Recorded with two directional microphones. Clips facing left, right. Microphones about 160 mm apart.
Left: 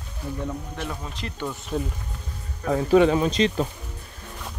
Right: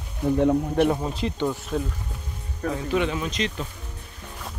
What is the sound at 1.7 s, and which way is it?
Speech, 5° left (ahead or behind).